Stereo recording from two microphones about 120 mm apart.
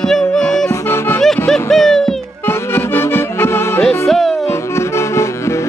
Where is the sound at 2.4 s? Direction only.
20° left (ahead or behind).